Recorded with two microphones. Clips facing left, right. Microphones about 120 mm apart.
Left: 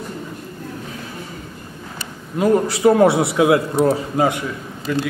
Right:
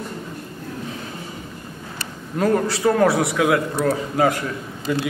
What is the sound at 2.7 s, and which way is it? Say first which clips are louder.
A man's voice: left 4 dB; 20° left (ahead or behind).